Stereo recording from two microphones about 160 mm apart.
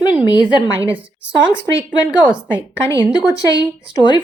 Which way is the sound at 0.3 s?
25° left (ahead or behind).